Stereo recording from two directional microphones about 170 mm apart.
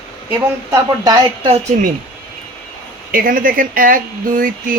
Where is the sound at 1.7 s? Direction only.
40° right (ahead or behind).